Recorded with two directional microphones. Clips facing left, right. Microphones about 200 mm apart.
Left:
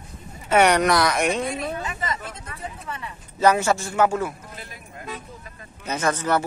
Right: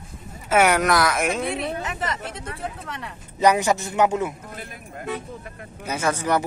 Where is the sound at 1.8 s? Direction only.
75° right (ahead or behind).